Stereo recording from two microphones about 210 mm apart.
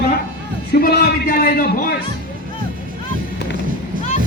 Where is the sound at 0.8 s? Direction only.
45° left (ahead or behind).